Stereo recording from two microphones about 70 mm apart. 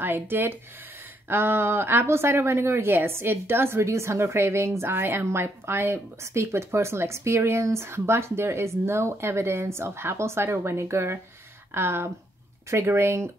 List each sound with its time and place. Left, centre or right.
0.0 s speech: right